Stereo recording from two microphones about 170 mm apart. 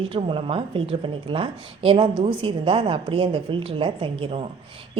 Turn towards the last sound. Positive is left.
turn(degrees=-30)  # may be behind; listen again after turning